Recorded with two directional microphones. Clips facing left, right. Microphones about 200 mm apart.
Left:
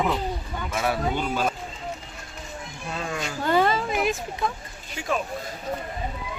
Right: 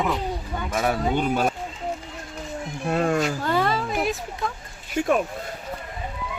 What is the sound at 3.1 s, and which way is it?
Speech, 45° right (ahead or behind).